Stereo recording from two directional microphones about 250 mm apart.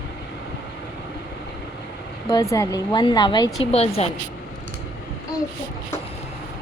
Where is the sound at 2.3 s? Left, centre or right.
Centre.